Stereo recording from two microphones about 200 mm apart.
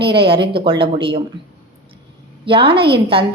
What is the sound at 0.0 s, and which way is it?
A woman's voice, 25° right (ahead or behind).